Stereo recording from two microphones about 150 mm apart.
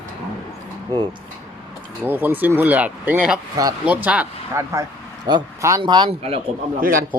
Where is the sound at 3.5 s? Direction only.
25° right (ahead or behind).